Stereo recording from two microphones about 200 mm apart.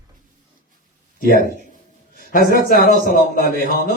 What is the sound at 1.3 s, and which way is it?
Speech, 45° right (ahead or behind).